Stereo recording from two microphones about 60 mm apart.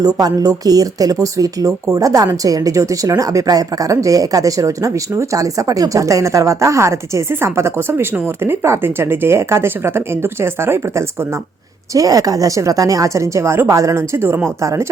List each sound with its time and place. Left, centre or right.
0.0 s speech: right
11.9 s speech: right
14.6 s speech: right